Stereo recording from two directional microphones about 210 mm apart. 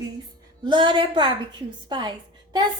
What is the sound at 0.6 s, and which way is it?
A woman's voice, 20° right (ahead or behind).